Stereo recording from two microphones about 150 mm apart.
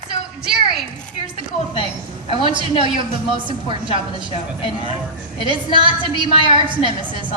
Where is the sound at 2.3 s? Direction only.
35° right (ahead or behind).